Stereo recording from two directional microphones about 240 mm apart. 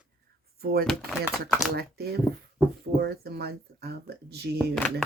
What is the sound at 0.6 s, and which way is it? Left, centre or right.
Speech, right.